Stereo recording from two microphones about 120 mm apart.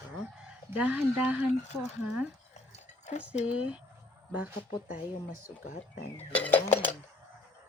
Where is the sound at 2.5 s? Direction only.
70° left (ahead or behind).